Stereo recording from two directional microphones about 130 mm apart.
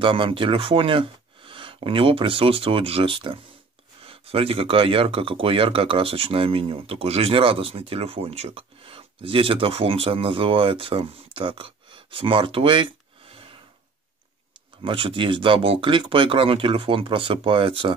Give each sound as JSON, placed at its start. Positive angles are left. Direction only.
{"t": 0.0, "sound": "speech", "side_deg": -40}
{"t": 13.3, "sound": "a sound", "side_deg": -40}
{"t": 14.8, "sound": "speech", "side_deg": -45}